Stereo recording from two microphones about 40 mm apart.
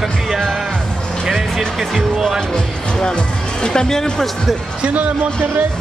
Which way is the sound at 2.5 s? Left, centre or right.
Left.